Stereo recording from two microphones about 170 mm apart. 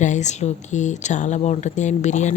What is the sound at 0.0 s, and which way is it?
Speech, 45° left (ahead or behind).